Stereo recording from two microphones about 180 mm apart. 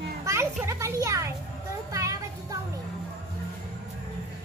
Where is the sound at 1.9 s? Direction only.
20° right (ahead or behind).